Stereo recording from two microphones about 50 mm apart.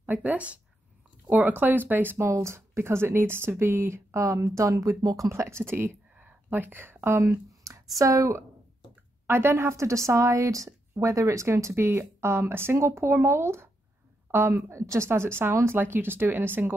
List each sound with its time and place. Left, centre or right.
0.0 s speech: right
2.1 s speech: right
4.1 s speech: right
6.1 s a sound: right
7.2 s a woman's voice: right
9.3 s speech: right
15.0 s speech: right